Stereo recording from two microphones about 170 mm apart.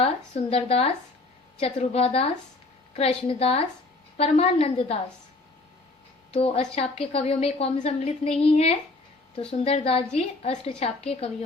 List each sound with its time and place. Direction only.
0.0 s a woman's voice: 35° left (ahead or behind)
6.3 s a woman's voice: 35° left (ahead or behind)